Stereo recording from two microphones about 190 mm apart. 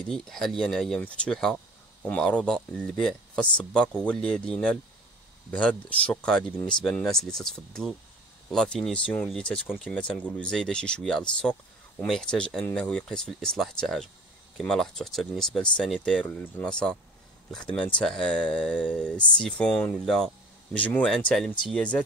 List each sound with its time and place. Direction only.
0.0 s speech: 5° left (ahead or behind)